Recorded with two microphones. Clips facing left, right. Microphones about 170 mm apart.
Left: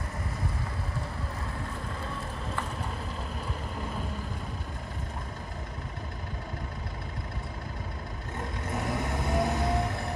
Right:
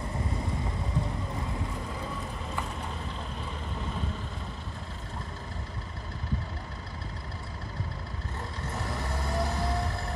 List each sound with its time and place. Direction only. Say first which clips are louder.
8.7 s vehicle: left 4 dB; 20° left (ahead or behind)